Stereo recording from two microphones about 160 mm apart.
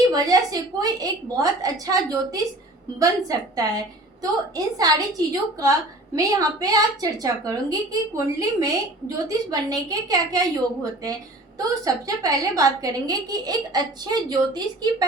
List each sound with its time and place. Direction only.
0.1 s a woman's voice: 25° right (ahead or behind)
11.7 s a woman's voice: 20° right (ahead or behind)